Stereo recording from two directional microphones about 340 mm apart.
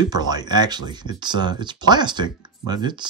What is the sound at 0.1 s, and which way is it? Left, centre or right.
Speech, centre.